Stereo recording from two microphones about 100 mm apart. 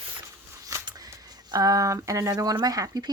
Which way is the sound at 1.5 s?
35° right (ahead or behind).